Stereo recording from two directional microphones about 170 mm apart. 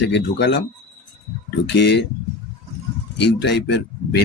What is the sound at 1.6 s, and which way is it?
Speech, 90° left.